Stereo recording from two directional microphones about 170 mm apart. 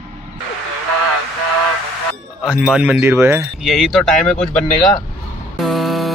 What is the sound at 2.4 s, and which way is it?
Speech, 5° right (ahead or behind).